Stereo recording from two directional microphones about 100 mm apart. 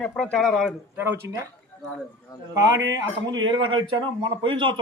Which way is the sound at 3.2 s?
50° right (ahead or behind).